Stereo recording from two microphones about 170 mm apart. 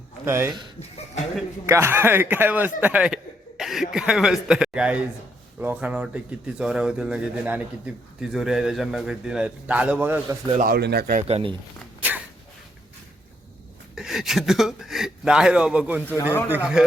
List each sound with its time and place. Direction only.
0.3 s a man's voice: 15° right (ahead or behind)
0.8 s speech: 40° left (ahead or behind)
1.6 s a man's voice: 15° right (ahead or behind)
10.6 s speech: 70° right (ahead or behind)
11.2 s speech: 35° right (ahead or behind)
13.9 s speech: centre (ahead or behind)